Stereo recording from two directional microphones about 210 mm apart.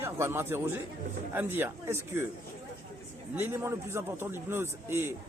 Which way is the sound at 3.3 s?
10° right (ahead or behind).